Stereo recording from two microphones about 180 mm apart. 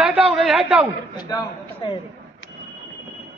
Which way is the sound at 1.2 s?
20° left (ahead or behind).